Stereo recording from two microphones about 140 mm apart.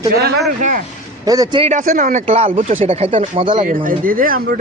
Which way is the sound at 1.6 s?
65° right (ahead or behind).